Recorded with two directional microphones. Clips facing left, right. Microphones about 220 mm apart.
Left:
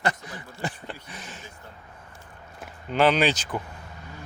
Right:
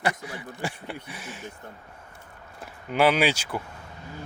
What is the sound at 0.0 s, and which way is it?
Speech, 10° right (ahead or behind).